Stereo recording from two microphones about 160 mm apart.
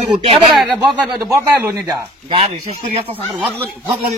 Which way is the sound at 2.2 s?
35° right (ahead or behind).